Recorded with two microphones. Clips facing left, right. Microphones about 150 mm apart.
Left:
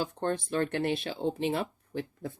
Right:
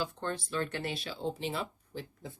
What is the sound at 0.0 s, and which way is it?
Speech, 50° left (ahead or behind).